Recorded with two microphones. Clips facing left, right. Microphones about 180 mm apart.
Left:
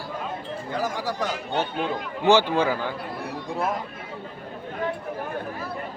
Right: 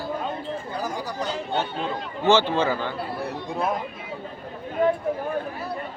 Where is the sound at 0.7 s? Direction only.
90° left.